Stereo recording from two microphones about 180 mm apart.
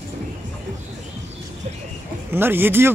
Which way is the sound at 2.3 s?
10° right (ahead or behind).